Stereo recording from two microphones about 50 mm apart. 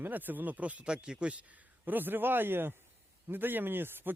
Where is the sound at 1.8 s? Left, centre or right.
Right.